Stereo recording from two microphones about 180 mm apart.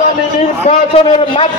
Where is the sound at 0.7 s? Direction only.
30° left (ahead or behind).